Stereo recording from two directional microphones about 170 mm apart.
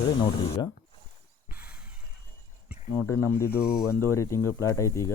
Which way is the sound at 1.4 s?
10° right (ahead or behind).